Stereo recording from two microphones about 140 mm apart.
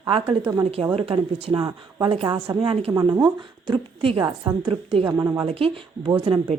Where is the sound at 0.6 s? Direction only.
45° right (ahead or behind).